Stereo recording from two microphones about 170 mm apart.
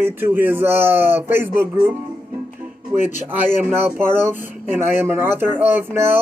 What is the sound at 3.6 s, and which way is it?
Speech, 10° right (ahead or behind).